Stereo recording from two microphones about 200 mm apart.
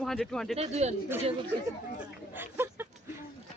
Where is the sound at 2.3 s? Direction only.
10° right (ahead or behind).